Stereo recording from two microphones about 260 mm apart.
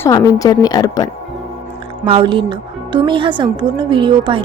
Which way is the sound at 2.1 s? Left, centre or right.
Centre.